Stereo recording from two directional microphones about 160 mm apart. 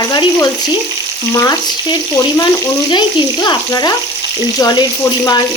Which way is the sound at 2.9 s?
30° left (ahead or behind).